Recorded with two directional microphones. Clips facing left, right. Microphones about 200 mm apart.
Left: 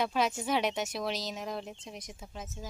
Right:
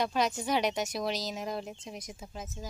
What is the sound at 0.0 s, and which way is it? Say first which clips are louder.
Speech: even; 5° left (ahead or behind).